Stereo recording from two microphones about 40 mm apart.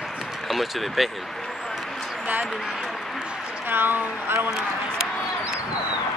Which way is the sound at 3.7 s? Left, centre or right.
Right.